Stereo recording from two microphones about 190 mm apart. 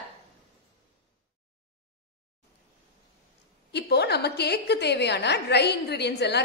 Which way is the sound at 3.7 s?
60° left (ahead or behind).